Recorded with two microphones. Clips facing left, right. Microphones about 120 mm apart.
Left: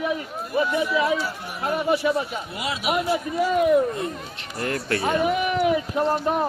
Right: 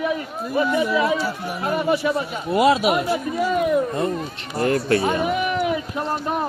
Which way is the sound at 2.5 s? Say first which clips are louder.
Right 11 dB; 45° right (ahead or behind).